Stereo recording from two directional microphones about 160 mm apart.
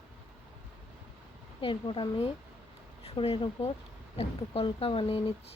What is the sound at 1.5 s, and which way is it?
Speech, 30° left (ahead or behind).